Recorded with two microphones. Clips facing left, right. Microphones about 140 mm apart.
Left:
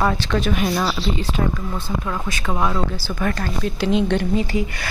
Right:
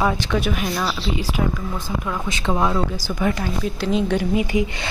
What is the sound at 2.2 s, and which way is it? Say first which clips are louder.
Speech: right 2 dB; 25° right (ahead or behind).